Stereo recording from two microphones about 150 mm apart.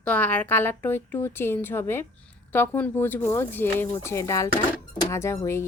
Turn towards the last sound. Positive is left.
turn(degrees=15)  # may be behind; listen again after turning